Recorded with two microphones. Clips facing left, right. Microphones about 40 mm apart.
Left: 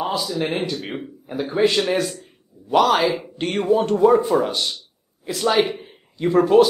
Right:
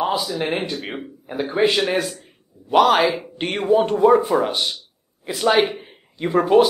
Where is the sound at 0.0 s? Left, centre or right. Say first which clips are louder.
Right 2 dB; centre.